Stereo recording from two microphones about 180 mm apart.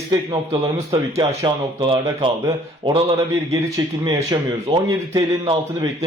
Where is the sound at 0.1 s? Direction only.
20° right (ahead or behind).